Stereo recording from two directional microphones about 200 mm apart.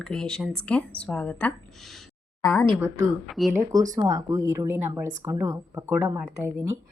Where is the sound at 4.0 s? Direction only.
20° right (ahead or behind).